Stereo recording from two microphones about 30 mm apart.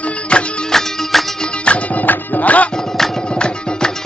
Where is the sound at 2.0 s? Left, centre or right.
Left.